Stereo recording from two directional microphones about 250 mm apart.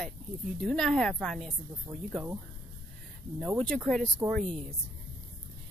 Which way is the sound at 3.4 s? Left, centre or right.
Centre.